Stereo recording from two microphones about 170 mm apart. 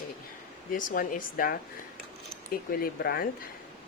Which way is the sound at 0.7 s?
50° left (ahead or behind).